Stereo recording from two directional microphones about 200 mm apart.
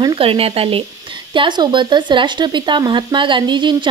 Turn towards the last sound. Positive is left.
turn(degrees=-25)  # may be behind; listen again after turning